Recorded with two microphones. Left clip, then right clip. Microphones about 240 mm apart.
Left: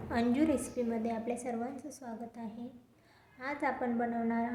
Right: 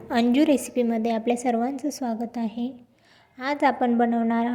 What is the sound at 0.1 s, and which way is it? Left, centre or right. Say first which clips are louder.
A woman's voice: right 10 dB; right.